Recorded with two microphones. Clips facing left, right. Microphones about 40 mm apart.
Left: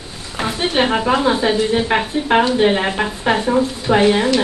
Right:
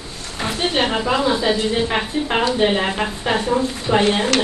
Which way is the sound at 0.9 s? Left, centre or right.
Left.